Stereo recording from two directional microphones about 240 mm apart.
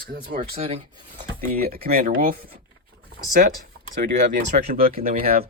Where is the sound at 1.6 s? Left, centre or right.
Right.